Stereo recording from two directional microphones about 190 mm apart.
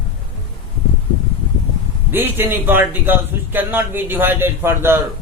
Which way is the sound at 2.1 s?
10° right (ahead or behind).